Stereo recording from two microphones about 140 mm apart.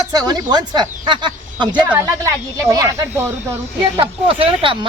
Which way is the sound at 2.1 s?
20° right (ahead or behind).